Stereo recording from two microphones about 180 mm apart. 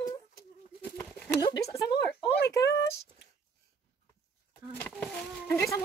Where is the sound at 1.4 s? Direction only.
20° left (ahead or behind).